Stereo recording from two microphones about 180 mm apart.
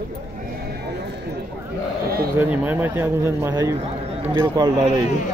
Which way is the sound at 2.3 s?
10° right (ahead or behind).